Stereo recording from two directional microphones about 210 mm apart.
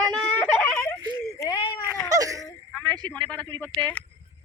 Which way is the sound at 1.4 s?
20° left (ahead or behind).